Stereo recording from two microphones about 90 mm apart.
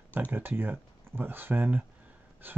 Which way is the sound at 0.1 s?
20° right (ahead or behind).